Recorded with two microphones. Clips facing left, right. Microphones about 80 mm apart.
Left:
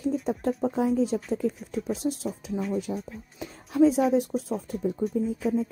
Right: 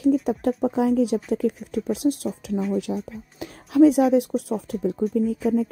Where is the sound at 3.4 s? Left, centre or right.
Right.